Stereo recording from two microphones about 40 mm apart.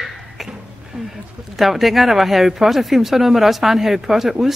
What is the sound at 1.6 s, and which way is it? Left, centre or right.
Speech, centre.